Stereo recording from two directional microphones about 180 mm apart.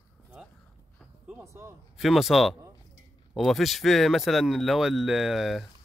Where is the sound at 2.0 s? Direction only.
Centre (ahead or behind).